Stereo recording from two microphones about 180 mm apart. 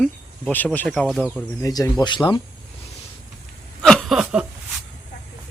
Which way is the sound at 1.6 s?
20° left (ahead or behind).